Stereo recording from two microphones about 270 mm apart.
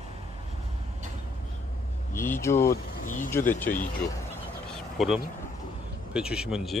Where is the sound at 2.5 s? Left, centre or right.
Left.